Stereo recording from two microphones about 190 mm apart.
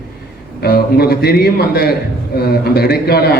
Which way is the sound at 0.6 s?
55° left (ahead or behind).